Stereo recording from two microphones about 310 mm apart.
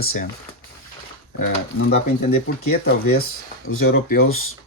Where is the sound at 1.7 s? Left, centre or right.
Left.